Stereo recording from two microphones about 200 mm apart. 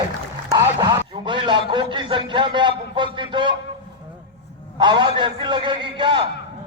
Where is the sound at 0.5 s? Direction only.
20° right (ahead or behind).